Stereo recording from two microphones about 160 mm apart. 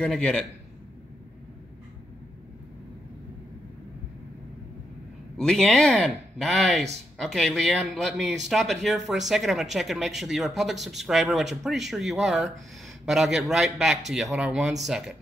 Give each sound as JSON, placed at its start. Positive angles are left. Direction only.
{"t": 0.0, "sound": "a man's voice", "side_deg": 5}
{"t": 5.4, "sound": "a man's voice", "side_deg": 5}